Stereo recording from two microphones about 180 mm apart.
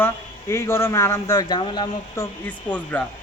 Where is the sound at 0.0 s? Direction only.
15° left (ahead or behind).